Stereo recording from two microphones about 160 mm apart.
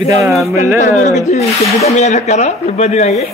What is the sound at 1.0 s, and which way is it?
Speech, 45° left (ahead or behind).